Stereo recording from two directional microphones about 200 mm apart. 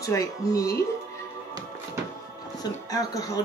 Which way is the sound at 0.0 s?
15° left (ahead or behind).